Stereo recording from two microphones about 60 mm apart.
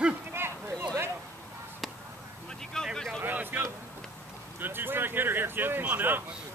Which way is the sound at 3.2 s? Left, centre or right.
Right.